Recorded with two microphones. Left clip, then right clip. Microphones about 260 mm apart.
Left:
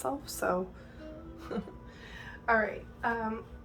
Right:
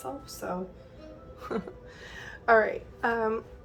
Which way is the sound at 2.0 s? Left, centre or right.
Right.